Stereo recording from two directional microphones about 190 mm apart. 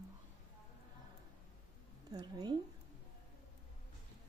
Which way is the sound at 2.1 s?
20° right (ahead or behind).